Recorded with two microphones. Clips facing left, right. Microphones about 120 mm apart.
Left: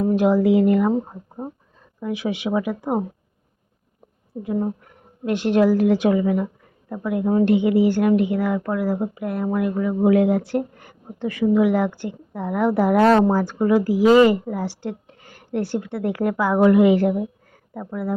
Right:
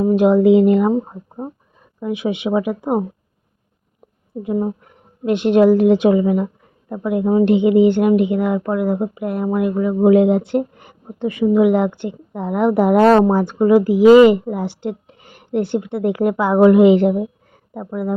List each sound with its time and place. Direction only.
0.0 s a woman's voice: 20° right (ahead or behind)
2.0 s a woman's voice: 20° right (ahead or behind)
5.2 s a woman's voice: 20° right (ahead or behind)